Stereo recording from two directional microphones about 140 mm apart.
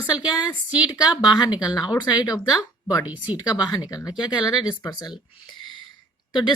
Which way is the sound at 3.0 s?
10° right (ahead or behind).